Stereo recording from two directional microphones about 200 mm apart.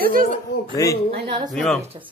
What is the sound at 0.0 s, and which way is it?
Speech, 45° right (ahead or behind).